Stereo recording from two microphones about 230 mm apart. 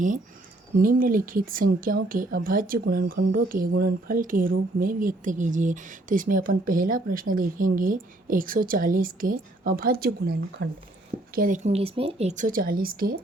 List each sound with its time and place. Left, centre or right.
0.8 s a woman's voice: right